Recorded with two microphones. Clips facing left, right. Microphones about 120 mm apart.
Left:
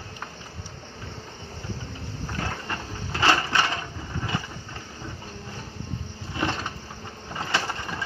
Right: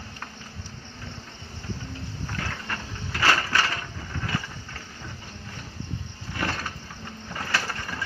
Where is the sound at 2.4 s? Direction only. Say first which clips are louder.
Left 4 dB; 25° left (ahead or behind).